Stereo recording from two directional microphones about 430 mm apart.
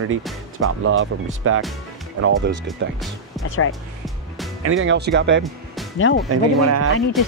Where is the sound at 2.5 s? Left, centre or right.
Centre.